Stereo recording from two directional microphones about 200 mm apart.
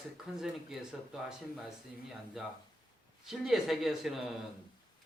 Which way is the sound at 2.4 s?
Centre (ahead or behind).